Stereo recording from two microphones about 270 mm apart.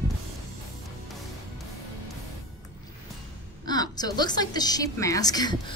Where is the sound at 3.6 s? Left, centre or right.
Centre.